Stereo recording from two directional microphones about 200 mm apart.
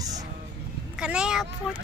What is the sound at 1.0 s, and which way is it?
Speech, 5° right (ahead or behind).